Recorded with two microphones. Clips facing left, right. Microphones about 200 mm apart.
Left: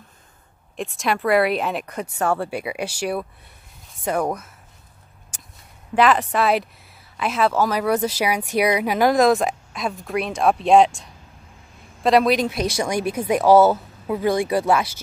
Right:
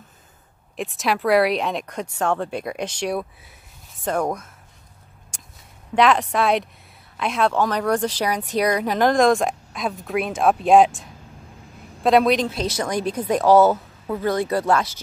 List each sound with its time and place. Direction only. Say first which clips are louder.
0.7 s speech: even; centre (ahead or behind)
5.3 s a sound: left 1 dB; centre (ahead or behind)
5.9 s speech: even; centre (ahead or behind)
12.4 s a woman's voice: left 2 dB; 10° left (ahead or behind)